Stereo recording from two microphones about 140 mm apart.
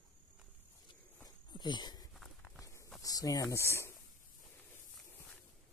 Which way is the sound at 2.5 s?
20° left (ahead or behind).